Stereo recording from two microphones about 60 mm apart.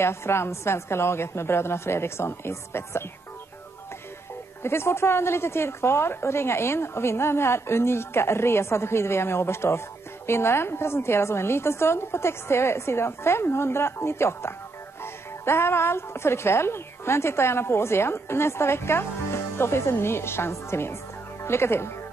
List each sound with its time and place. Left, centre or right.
0.0 s a woman's voice: left
4.6 s a woman's voice: left